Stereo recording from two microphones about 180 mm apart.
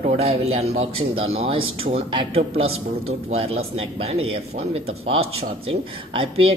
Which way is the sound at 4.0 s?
35° right (ahead or behind).